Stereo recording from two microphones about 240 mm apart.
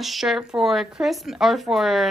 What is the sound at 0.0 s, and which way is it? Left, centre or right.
A woman's voice, centre.